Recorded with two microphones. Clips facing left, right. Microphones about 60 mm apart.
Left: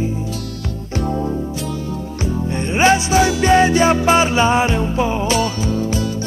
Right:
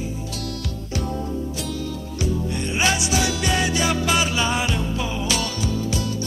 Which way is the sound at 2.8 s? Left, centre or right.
Left.